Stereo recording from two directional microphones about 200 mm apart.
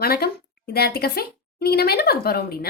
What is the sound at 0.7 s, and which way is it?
Speech, 50° left (ahead or behind).